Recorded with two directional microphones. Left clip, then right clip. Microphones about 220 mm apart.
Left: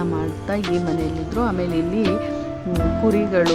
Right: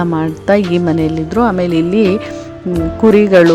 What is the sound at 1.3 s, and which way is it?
Speech, 30° right (ahead or behind).